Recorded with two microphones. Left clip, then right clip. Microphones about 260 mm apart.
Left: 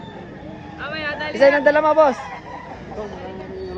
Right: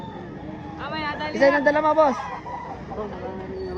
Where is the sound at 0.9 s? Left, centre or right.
Right.